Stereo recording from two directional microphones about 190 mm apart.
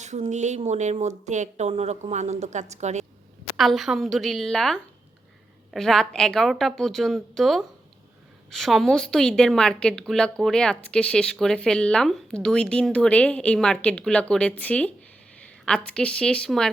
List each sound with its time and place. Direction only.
0.0 s speech: 40° right (ahead or behind)
3.6 s a woman's voice: centre (ahead or behind)